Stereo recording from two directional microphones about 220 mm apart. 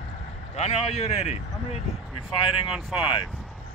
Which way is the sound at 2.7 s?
5° right (ahead or behind).